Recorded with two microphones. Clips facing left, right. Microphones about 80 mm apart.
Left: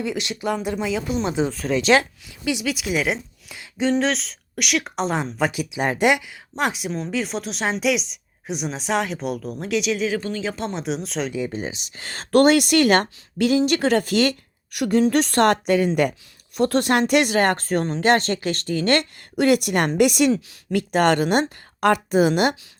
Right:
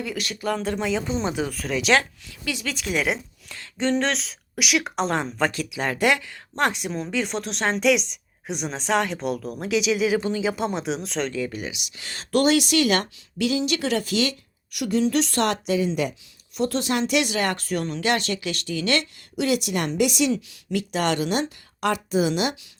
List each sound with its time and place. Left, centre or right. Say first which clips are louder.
0.0 s speech: left 3 dB; left
0.8 s speech: left 1 dB; centre
1.3 s speech: left 4 dB; left
1.5 s speech: left 3 dB; centre
2.4 s speech: left 5 dB; centre
10.2 s speech: right 2 dB; centre
10.4 s speech: right 2 dB; centre
11.3 s speech: left 2 dB; left